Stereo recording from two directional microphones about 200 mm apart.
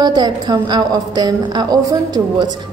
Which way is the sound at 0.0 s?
20° right (ahead or behind).